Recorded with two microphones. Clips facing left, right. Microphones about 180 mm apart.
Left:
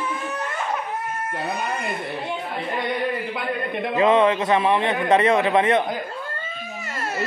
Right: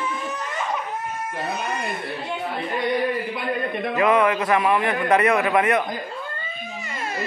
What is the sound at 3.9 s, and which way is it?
A man's voice, 25° left (ahead or behind).